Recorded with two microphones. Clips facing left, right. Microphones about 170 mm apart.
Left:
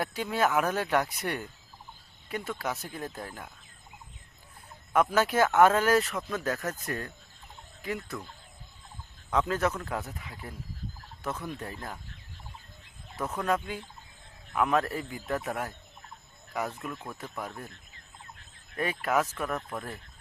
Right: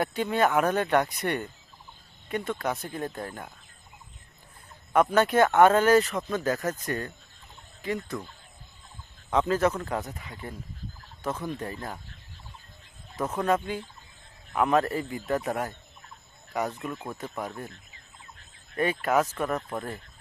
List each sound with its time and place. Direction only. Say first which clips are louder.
0.0 s speech: right 3 dB; centre (ahead or behind)
4.9 s speech: right 3 dB; 5° left (ahead or behind)
9.3 s speech: right 4 dB; centre (ahead or behind)
13.3 s speech: right 4 dB; centre (ahead or behind)
16.9 s speech: right 4 dB; 25° right (ahead or behind)
17.2 s speech: right 4 dB; centre (ahead or behind)
18.8 s speech: right 4 dB; centre (ahead or behind)